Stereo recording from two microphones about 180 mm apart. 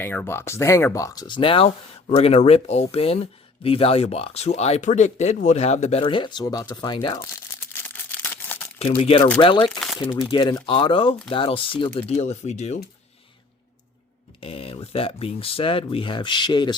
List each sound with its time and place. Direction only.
0.0 s speech: 10° left (ahead or behind)
7.2 s crumpling: 15° left (ahead or behind)
8.8 s speech: 30° left (ahead or behind)
14.4 s speech: 30° left (ahead or behind)